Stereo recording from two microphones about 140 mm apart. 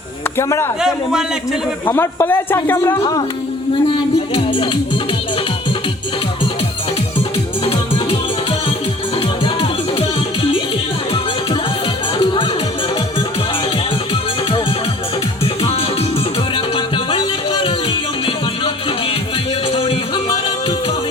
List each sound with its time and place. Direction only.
0.3 s a man's voice: 20° left (ahead or behind)
0.8 s a man's voice: 5° right (ahead or behind)
1.9 s a man's voice: 15° left (ahead or behind)
4.4 s speech: 40° left (ahead or behind)
16.7 s music: 35° left (ahead or behind)